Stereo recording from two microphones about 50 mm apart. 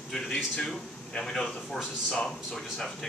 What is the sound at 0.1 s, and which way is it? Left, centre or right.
A man's voice, centre.